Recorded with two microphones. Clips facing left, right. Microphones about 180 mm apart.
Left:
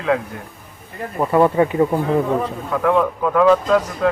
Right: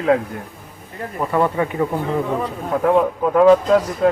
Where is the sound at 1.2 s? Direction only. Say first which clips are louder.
Left 4 dB; 20° left (ahead or behind).